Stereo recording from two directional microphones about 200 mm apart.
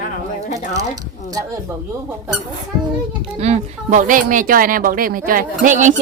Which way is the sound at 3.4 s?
35° right (ahead or behind).